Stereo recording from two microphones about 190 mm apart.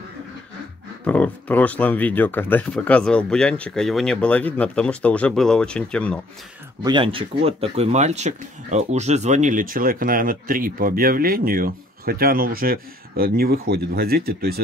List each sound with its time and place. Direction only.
1.0 s speech: 10° left (ahead or behind)
6.8 s speech: 25° right (ahead or behind); by 14.6 s 55° right (ahead or behind)